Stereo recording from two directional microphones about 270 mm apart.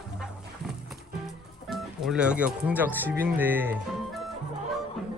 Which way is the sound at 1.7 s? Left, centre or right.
Centre.